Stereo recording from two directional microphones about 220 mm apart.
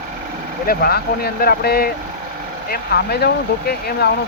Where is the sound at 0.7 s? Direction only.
45° left (ahead or behind).